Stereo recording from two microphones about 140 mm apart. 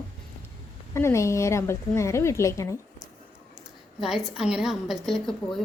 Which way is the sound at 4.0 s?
Centre (ahead or behind).